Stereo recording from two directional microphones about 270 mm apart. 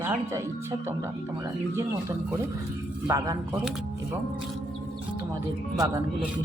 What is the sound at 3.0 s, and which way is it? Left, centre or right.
Speech, centre.